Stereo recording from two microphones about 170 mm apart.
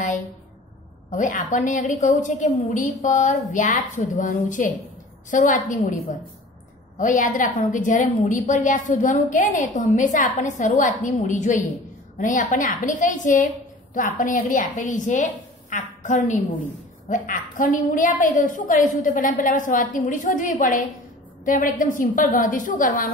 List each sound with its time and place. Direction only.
1.1 s a woman's voice: 50° left (ahead or behind)